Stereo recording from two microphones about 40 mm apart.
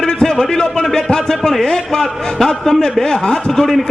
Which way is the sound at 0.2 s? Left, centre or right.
Centre.